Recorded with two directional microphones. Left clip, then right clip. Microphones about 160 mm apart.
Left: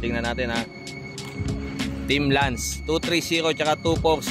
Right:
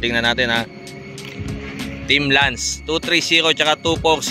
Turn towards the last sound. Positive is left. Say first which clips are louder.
# right 4 dB
turn(degrees=5)  # may be behind; listen again after turning